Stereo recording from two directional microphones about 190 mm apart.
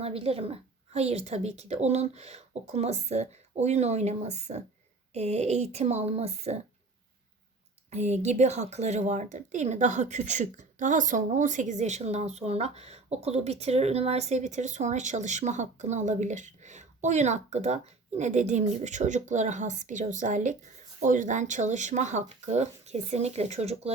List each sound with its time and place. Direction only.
0.0 s speech: 30° right (ahead or behind)
7.9 s speech: 35° right (ahead or behind)